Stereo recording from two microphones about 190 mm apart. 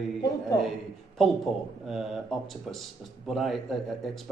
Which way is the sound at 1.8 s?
Centre (ahead or behind).